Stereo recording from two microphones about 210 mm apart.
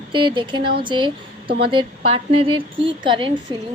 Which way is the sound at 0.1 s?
25° right (ahead or behind).